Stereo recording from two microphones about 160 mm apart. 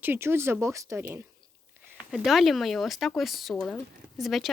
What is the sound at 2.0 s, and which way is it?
Speech, centre (ahead or behind).